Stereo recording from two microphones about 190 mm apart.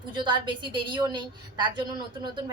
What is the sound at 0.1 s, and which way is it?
A woman's voice, 25° right (ahead or behind).